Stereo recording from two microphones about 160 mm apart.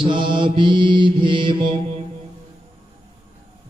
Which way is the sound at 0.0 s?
30° right (ahead or behind).